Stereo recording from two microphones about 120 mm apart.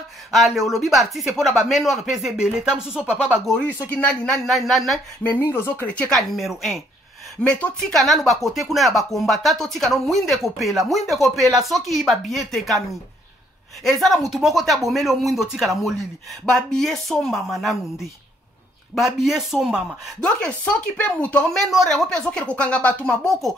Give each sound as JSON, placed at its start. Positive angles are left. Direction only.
{"t": 0.3, "sound": "speech", "side_deg": 0}
{"t": 3.4, "sound": "speech", "side_deg": 5}
{"t": 4.3, "sound": "speech", "side_deg": 0}
{"t": 5.2, "sound": "speech", "side_deg": 15}
{"t": 13.8, "sound": "speech", "side_deg": 0}
{"t": 18.9, "sound": "speech", "side_deg": 0}
{"t": 20.2, "sound": "speech", "side_deg": 10}